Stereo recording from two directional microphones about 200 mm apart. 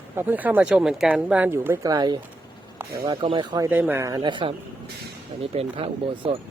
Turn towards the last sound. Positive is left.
turn(degrees=-25)  # may be behind; listen again after turning